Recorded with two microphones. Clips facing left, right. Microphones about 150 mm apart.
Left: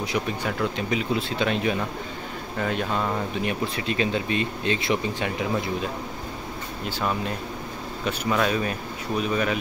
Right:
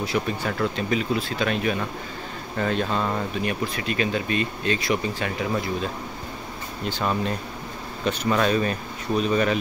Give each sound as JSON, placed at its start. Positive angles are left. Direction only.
{"t": 0.0, "sound": "speech", "side_deg": 15}
{"t": 2.6, "sound": "speech", "side_deg": 10}
{"t": 3.4, "sound": "speech", "side_deg": 25}
{"t": 6.9, "sound": "speech", "side_deg": 5}